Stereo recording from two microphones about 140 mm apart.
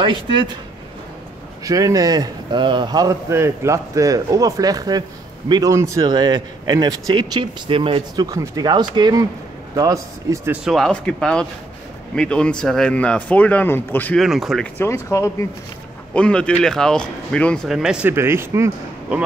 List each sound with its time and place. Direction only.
0.0 s speech: 35° right (ahead or behind)
1.6 s a man's voice: 25° right (ahead or behind)
8.3 s a man's voice: 25° right (ahead or behind)
10.5 s speech: 5° right (ahead or behind); by 14.1 s 15° left (ahead or behind)
14.1 s speech: centre (ahead or behind)
14.8 s speech: 20° left (ahead or behind)
16.1 s speech: 10° left (ahead or behind)
17.6 s speech: 5° right (ahead or behind)
18.1 s speech: 15° right (ahead or behind)